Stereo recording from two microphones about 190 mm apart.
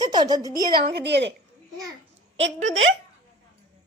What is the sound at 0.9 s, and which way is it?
Speech, 65° right (ahead or behind).